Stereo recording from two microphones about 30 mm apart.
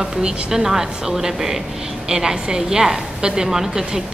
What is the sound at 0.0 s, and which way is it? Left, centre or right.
Speech, right.